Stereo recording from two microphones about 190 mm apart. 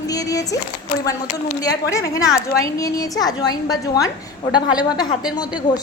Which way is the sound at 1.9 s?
15° left (ahead or behind).